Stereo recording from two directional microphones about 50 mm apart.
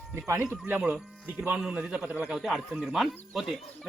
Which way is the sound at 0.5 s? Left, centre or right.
Right.